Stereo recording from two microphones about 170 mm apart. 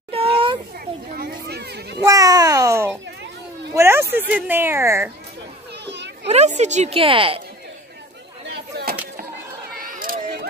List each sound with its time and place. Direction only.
0.1 s children playing: 35° right (ahead or behind)
0.7 s children playing: 65° right (ahead or behind)
2.0 s a sound: 20° right (ahead or behind)
4.3 s speech: 10° right (ahead or behind)
5.9 s children playing: 90° right
6.2 s a woman's voice: 40° right (ahead or behind)
9.8 s a sound: 55° right (ahead or behind)